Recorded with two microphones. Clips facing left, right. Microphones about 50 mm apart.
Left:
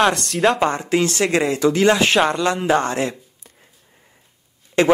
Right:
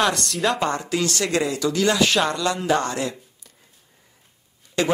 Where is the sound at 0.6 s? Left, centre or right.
Left.